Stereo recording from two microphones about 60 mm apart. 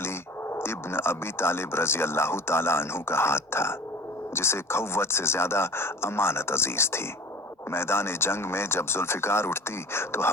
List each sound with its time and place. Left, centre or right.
0.0 s speech: left